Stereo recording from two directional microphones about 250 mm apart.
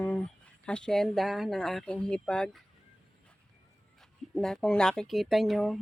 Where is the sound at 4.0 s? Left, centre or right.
Centre.